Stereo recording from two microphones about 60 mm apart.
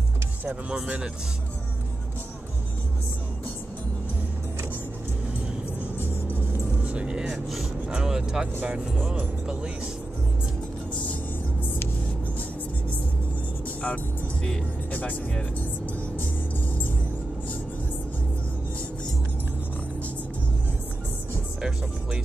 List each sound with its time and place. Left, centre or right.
0.5 s speech: centre
0.8 s speech: centre
6.8 s vehicle: right
7.9 s speech: centre
8.9 s speech: right
13.8 s speech: centre
21.5 s speech: centre